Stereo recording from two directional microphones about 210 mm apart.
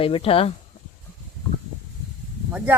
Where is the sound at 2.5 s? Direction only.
5° right (ahead or behind).